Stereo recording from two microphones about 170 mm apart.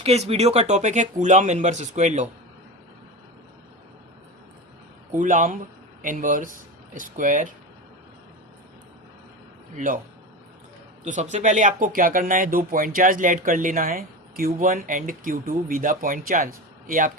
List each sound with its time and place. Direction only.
0.0 s speech: 40° right (ahead or behind)
5.1 s speech: 50° right (ahead or behind)
9.7 s speech: 50° right (ahead or behind)
11.0 s speech: 45° right (ahead or behind)